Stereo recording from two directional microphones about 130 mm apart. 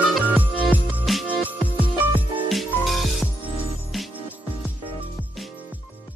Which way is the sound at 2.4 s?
Centre (ahead or behind).